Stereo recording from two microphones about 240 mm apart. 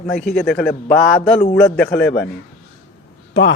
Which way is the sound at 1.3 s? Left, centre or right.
Left.